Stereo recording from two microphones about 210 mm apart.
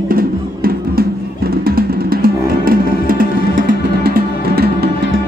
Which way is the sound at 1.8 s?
45° right (ahead or behind).